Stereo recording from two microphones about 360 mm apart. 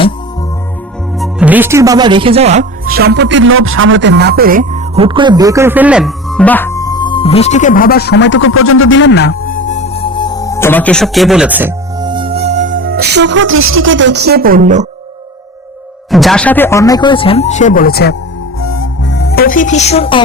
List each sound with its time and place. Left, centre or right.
1.2 s speech: centre
16.1 s speech: centre; by 18.2 s left
18.6 s music: left; by 20.2 s centre